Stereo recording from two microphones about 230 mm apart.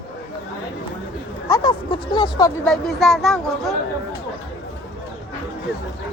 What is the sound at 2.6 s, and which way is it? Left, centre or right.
Speech, centre.